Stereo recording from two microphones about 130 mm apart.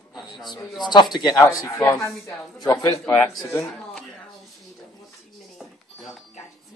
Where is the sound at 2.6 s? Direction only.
25° left (ahead or behind).